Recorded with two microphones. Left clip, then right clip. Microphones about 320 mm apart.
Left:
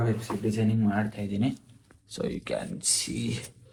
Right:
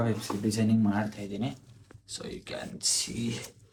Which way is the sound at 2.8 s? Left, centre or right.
Right.